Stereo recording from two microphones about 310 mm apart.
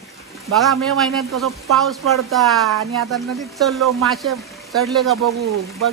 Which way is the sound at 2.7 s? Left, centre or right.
Right.